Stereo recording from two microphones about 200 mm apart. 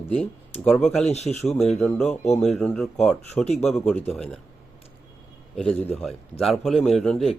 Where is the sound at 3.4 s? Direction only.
30° left (ahead or behind).